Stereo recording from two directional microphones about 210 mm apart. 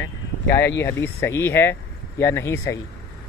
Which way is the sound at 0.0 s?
10° left (ahead or behind).